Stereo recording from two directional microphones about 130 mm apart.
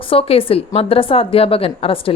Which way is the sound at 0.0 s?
45° left (ahead or behind).